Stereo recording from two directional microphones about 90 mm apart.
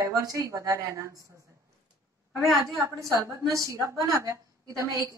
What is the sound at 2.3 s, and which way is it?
Speech, centre (ahead or behind).